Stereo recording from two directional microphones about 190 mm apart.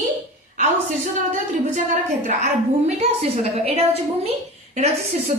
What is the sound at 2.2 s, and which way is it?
A woman's voice, 35° right (ahead or behind).